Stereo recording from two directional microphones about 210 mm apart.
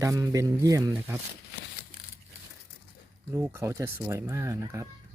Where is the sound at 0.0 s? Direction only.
15° right (ahead or behind).